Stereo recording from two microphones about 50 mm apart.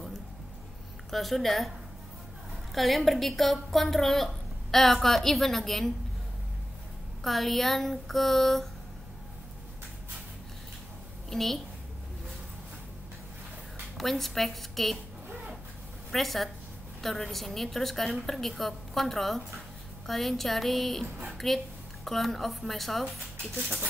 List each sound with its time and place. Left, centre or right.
1.1 s a woman's voice: centre
2.7 s a woman's voice: centre
7.2 s a woman's voice: centre
11.2 s a woman's voice: centre
13.9 s a woman's voice: centre
16.1 s a woman's voice: centre